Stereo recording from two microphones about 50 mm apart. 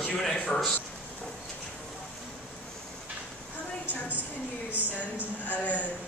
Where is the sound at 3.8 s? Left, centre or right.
Right.